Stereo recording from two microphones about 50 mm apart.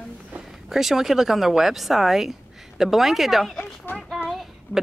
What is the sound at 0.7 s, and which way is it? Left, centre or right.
A woman's voice, centre.